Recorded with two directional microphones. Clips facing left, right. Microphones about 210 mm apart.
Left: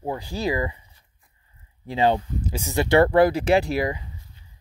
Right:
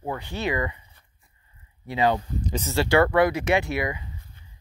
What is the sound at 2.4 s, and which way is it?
Speech, 10° left (ahead or behind).